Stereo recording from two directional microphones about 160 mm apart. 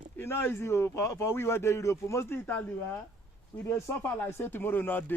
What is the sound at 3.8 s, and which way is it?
Speech, 15° left (ahead or behind).